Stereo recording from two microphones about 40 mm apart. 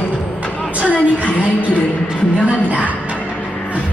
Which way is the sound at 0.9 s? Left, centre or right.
Left.